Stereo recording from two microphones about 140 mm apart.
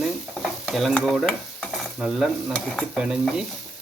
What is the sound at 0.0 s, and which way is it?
Stir, centre (ahead or behind).